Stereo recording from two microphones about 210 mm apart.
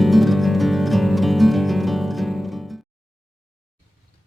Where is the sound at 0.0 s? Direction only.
Centre (ahead or behind).